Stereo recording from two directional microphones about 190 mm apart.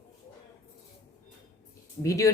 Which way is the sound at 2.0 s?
15° left (ahead or behind).